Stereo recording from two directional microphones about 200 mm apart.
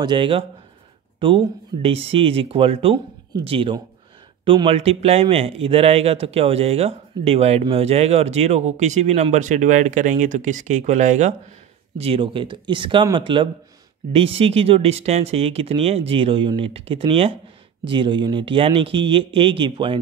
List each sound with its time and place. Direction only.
0.0 s speech: 25° right (ahead or behind)